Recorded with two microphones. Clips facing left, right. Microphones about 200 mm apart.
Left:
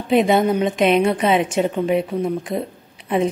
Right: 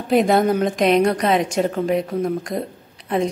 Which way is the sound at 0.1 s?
Centre (ahead or behind).